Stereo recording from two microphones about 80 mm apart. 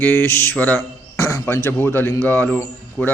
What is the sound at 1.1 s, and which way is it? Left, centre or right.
A man's voice, left.